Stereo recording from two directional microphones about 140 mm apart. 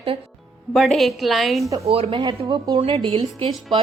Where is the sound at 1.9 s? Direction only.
45° right (ahead or behind).